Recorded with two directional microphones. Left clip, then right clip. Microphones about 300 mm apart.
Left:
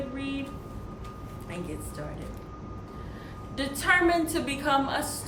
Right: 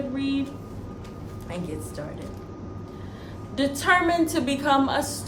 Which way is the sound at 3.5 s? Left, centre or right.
Centre.